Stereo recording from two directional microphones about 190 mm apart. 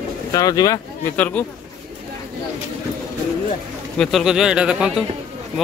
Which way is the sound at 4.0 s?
Centre (ahead or behind).